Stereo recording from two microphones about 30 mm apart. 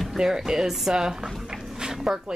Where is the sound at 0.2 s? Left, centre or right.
Right.